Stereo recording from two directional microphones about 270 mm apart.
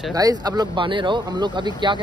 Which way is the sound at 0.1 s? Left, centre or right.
Centre.